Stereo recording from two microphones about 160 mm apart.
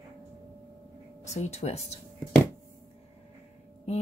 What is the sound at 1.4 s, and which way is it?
Speech, 45° left (ahead or behind).